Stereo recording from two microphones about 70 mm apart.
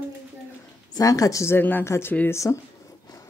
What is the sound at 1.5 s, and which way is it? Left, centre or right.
Speech, left.